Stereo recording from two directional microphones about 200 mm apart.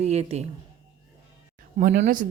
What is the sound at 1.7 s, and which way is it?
Speech, 45° right (ahead or behind).